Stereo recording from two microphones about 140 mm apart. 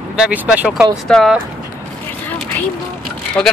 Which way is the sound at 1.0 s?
5° left (ahead or behind).